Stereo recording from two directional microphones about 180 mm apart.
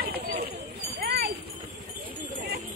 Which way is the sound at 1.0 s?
60° right (ahead or behind).